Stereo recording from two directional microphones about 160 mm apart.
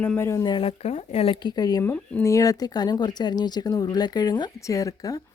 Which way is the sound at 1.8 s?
15° left (ahead or behind).